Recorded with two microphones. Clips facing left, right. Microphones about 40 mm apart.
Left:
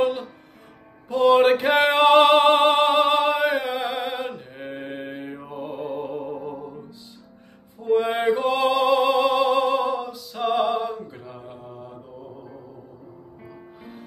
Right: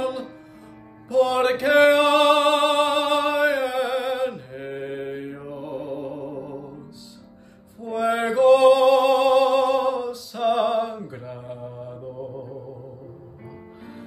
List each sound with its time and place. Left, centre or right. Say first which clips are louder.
0.0 s music: left 4 dB; left; by 3.3 s centre
3.3 s mantra: right 2 dB; left
7.8 s music: left 2 dB; left
8.5 s music: right 9 dB; centre
11.2 s mantra: right 4 dB; centre
13.5 s music: right 2 dB; centre